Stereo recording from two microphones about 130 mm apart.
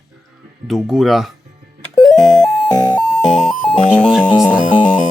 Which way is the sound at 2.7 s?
30° left (ahead or behind).